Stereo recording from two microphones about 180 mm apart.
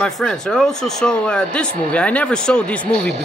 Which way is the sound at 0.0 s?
5° left (ahead or behind).